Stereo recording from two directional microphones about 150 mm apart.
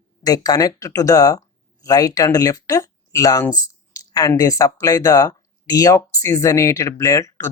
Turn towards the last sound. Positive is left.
turn(degrees=20)  # may be behind; listen again after turning